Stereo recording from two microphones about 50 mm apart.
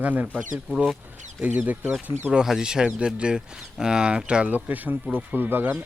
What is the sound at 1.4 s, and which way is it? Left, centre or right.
Speech, right.